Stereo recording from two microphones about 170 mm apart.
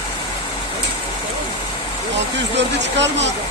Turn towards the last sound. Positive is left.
turn(degrees=-90)